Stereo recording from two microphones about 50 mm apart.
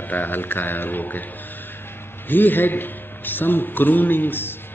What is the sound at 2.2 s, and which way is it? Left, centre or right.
A man's voice, left.